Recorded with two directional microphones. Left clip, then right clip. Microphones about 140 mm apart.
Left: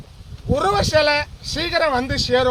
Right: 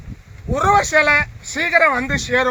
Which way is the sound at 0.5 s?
20° left (ahead or behind).